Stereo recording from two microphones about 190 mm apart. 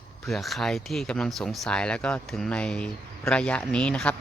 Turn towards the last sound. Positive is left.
turn(degrees=5)  # may be behind; listen again after turning